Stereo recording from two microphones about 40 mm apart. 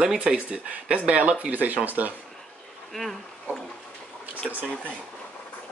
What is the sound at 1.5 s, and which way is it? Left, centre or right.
Speech, right.